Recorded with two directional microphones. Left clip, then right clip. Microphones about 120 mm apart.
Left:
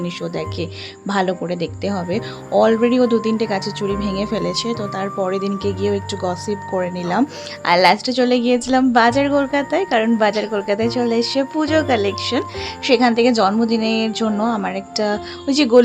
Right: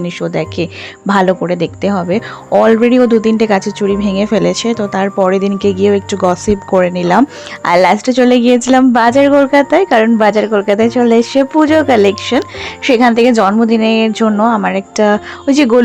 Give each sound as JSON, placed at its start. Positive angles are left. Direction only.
{"t": 0.0, "sound": "speech", "side_deg": -45}
{"t": 11.9, "sound": "speech", "side_deg": -55}
{"t": 12.2, "sound": "speech", "side_deg": -40}